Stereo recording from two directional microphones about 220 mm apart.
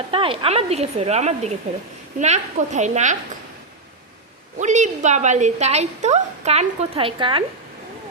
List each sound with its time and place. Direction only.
0.1 s a woman's voice: 25° right (ahead or behind)
4.6 s a woman's voice: 35° right (ahead or behind)